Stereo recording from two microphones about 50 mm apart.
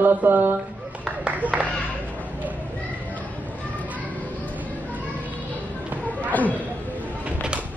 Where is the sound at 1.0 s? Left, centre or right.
Right.